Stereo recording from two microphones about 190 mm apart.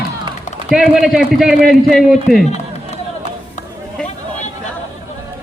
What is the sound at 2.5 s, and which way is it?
Run, 35° left (ahead or behind).